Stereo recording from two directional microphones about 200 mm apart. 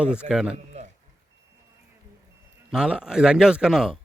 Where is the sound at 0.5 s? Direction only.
35° right (ahead or behind).